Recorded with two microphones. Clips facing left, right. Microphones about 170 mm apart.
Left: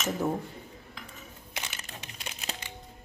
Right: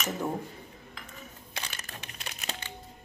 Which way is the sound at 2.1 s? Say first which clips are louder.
Even; 20° left (ahead or behind).